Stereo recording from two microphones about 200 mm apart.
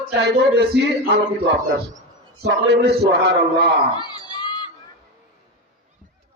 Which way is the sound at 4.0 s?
20° left (ahead or behind).